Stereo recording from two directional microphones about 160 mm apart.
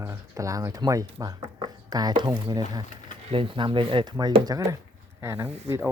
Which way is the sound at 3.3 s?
35° right (ahead or behind).